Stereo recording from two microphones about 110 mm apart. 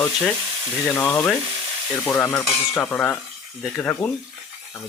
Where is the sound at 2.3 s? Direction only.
20° left (ahead or behind).